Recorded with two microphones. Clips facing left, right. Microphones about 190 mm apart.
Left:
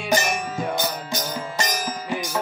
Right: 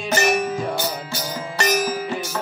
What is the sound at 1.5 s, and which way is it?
Music, 70° right (ahead or behind).